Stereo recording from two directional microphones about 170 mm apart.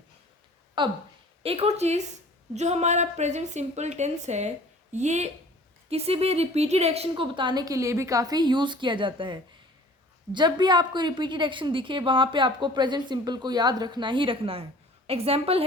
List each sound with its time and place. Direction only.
0.8 s a woman's voice: 25° right (ahead or behind)
7.1 s a woman's voice: 25° right (ahead or behind)